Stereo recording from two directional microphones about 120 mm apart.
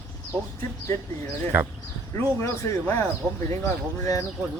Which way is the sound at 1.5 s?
15° right (ahead or behind).